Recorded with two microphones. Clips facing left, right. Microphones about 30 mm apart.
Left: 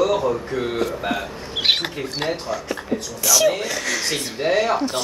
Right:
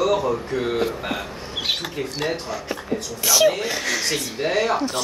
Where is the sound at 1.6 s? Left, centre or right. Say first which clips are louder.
Left 6 dB; left.